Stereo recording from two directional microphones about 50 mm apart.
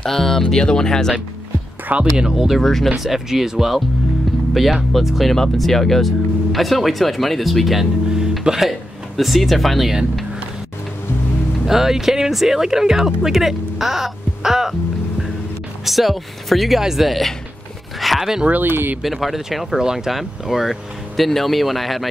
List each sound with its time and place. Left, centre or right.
0.0 s speech: centre
2.1 s speech: centre
2.6 s speech: centre
3.0 s speech: centre
4.9 s speech: centre
11.6 s speech: centre
15.8 s speech: centre
18.0 s a sound: centre
18.5 s speech: right
19.0 s speech: centre